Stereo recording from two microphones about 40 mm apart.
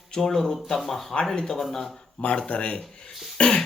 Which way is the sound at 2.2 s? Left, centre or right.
Left.